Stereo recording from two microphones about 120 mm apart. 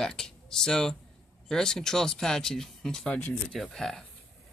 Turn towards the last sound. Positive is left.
turn(degrees=5)  # may be behind; listen again after turning